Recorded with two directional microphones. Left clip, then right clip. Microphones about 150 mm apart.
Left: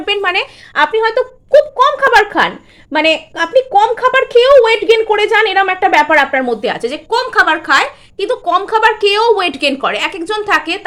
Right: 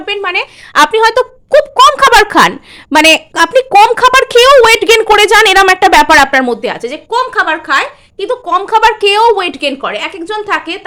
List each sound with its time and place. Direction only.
0.0 s a woman's voice: 10° left (ahead or behind)
0.7 s a woman's voice: 45° right (ahead or behind)
6.6 s a woman's voice: 15° right (ahead or behind)
6.8 s a woman's voice: centre (ahead or behind)
8.4 s a woman's voice: 15° right (ahead or behind)
9.5 s a woman's voice: centre (ahead or behind)